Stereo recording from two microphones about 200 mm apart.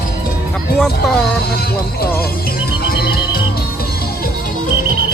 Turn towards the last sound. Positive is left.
turn(degrees=50)  # may be behind; listen again after turning